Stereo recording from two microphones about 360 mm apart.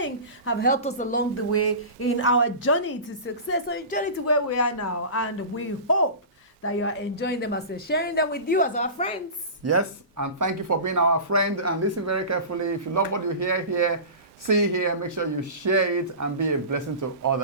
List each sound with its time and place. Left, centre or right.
0.0 s a woman's voice: left
1.5 s a woman's voice: left
4.3 s a woman's voice: left; by 9.1 s centre
9.6 s speech: right